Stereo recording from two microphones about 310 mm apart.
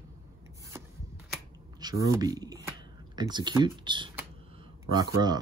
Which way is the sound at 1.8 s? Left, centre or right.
Centre.